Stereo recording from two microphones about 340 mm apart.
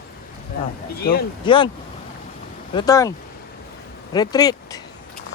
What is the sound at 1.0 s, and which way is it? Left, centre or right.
Speech, left.